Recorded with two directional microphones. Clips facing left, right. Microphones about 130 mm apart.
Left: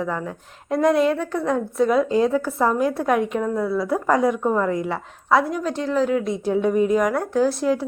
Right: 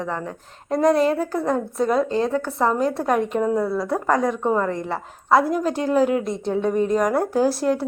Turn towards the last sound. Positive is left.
turn(degrees=0)  # may be behind; listen again after turning